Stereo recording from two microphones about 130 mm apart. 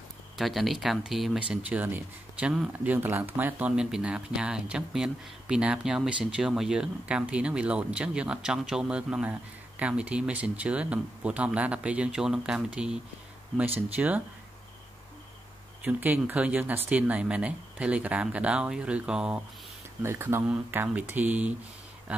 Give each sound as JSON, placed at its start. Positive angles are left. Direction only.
{"t": 0.4, "sound": "speech", "side_deg": 0}
{"t": 15.8, "sound": "speech", "side_deg": -10}
{"t": 20.0, "sound": "speech", "side_deg": -20}